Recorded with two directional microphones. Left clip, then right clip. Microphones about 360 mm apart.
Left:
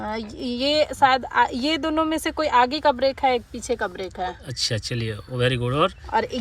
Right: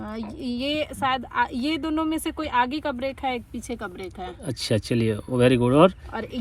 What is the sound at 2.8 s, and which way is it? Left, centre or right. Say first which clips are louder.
Speech: left 9 dB; left.